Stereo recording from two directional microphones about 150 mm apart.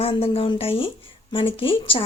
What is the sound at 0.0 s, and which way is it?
Speech, 40° left (ahead or behind).